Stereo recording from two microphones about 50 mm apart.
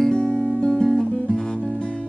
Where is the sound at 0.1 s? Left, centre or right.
Centre.